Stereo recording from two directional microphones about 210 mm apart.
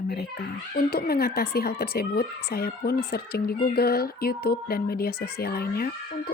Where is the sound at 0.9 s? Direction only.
45° left (ahead or behind).